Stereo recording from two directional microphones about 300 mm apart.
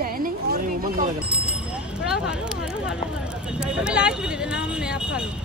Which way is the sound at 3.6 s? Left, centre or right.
Centre.